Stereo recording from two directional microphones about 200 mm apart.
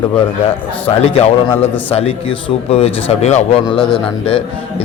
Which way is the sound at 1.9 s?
30° left (ahead or behind).